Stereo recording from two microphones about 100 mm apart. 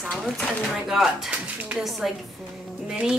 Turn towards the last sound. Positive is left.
turn(degrees=-5)  # may be behind; listen again after turning